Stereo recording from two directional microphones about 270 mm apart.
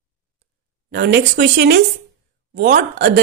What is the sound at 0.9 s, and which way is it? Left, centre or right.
A woman's voice, right.